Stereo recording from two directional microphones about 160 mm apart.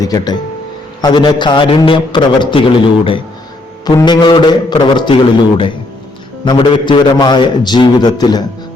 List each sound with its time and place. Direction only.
0.0 s a man's voice: 25° left (ahead or behind)
6.4 s a man's voice: 30° left (ahead or behind)